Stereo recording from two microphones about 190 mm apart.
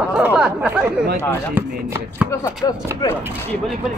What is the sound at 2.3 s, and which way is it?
Speech, 20° left (ahead or behind).